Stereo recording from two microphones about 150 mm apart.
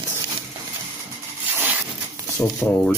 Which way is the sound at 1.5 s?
10° right (ahead or behind).